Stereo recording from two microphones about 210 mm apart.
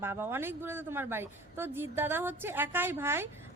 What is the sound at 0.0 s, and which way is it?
A woman's voice, 10° right (ahead or behind).